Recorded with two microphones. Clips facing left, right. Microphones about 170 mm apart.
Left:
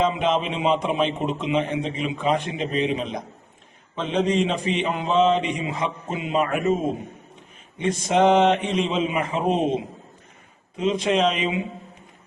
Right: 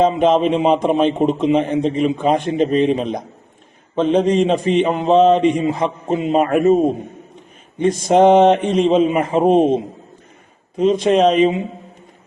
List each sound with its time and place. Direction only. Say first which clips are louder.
0.0 s a man's voice: right 8 dB; 40° right (ahead or behind)
10.8 s a man's voice: right 7 dB; 40° right (ahead or behind)